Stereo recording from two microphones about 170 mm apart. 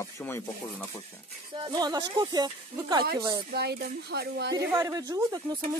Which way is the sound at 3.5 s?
70° right (ahead or behind).